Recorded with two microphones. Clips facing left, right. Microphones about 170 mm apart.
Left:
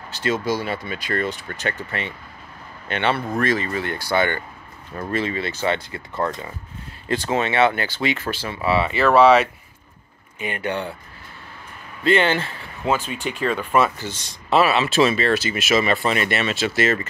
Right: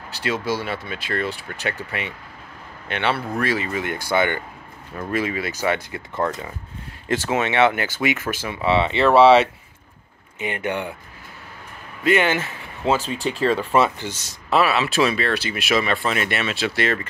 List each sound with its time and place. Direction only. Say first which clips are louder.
0.2 s speech: left 2 dB; 5° right (ahead or behind)
7.2 s speech: even; 15° right (ahead or behind)
12.0 s speech: left 1 dB; 10° right (ahead or behind)
12.8 s speech: right 2 dB; 35° right (ahead or behind)
14.1 s speech: left 2 dB; 5° right (ahead or behind)